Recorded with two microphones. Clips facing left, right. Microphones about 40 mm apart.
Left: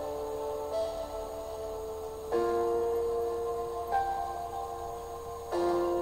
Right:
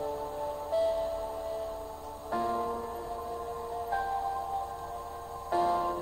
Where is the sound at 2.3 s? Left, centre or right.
Centre.